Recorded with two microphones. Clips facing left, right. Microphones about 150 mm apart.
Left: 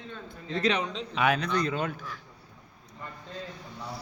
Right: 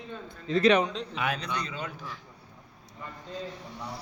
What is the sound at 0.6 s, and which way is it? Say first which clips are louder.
Speech: right 6 dB; 60° right (ahead or behind).